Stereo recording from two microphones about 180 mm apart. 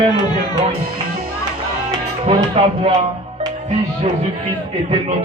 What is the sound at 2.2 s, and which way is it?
Music, 35° right (ahead or behind).